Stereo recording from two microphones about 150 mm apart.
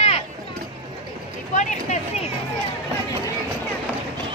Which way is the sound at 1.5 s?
55° left (ahead or behind).